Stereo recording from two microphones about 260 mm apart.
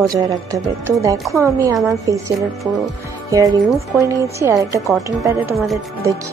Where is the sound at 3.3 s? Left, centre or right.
Centre.